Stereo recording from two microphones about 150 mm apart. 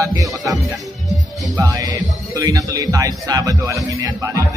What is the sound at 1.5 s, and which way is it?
Speech, 20° right (ahead or behind).